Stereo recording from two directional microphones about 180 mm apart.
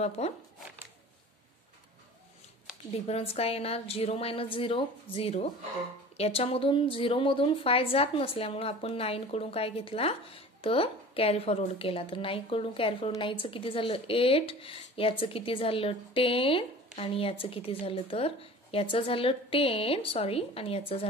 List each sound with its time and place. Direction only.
0.2 s speech: 35° left (ahead or behind)
2.9 s speech: 35° left (ahead or behind)